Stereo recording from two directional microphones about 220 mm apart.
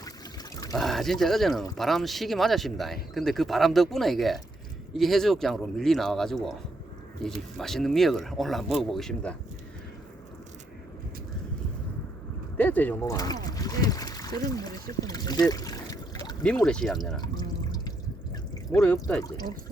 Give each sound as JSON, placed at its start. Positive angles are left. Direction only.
{"t": 0.7, "sound": "speech", "side_deg": 0}
{"t": 12.5, "sound": "speech", "side_deg": 5}
{"t": 16.6, "sound": "speech", "side_deg": 5}
{"t": 17.2, "sound": "drip", "side_deg": 20}
{"t": 18.7, "sound": "speech", "side_deg": 5}
{"t": 19.2, "sound": "speech", "side_deg": 20}